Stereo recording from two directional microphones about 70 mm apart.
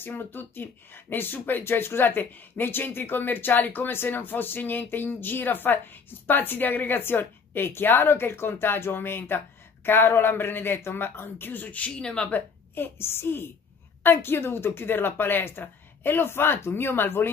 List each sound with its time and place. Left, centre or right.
0.0 s speech: left